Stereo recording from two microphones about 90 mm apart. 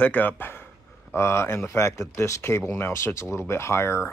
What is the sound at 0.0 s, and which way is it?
Speech, 20° left (ahead or behind).